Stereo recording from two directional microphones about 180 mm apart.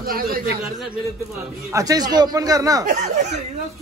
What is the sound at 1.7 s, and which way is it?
A man's voice, 20° right (ahead or behind).